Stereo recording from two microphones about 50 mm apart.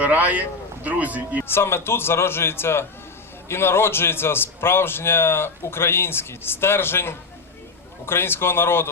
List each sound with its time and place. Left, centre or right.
0.0 s speech: right
1.5 s a man's voice: left